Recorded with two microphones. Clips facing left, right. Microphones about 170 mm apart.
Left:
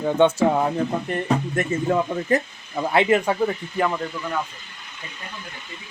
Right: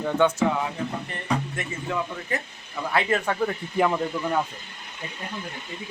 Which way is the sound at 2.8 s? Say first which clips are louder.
Left 6 dB; 25° left (ahead or behind).